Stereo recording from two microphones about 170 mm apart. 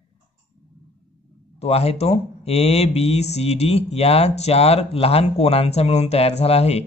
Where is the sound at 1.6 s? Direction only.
35° left (ahead or behind).